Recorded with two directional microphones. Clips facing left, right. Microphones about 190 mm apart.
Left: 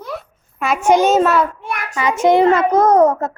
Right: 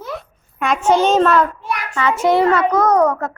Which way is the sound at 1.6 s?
50° left (ahead or behind).